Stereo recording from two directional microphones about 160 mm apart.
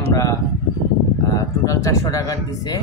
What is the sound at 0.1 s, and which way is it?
A man's voice, 20° left (ahead or behind).